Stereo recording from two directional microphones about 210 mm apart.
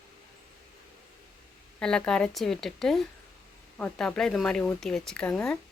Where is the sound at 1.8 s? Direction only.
5° left (ahead or behind).